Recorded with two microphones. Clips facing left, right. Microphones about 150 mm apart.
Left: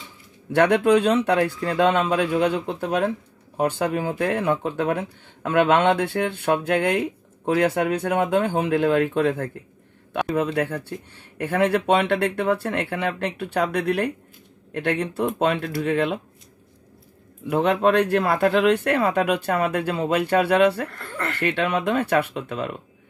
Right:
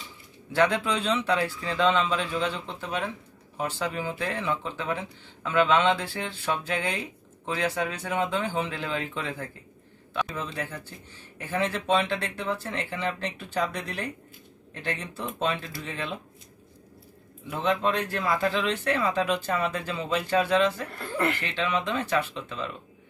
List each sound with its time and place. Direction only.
0.5 s speech: 60° left (ahead or behind)
17.5 s speech: 70° left (ahead or behind)
20.9 s speech: 15° right (ahead or behind)
21.4 s speech: 65° left (ahead or behind)